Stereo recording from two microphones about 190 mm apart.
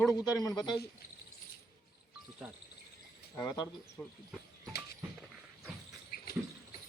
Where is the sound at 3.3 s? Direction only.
5° left (ahead or behind).